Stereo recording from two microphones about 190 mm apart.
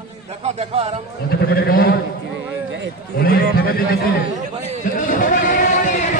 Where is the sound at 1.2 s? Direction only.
55° left (ahead or behind).